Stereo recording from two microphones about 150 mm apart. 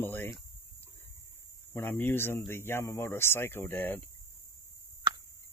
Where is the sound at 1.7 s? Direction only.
15° left (ahead or behind).